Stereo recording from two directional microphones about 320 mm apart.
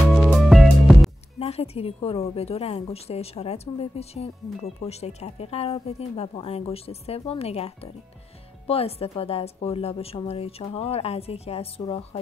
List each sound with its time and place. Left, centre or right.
0.1 s music: centre
1.4 s a woman's voice: centre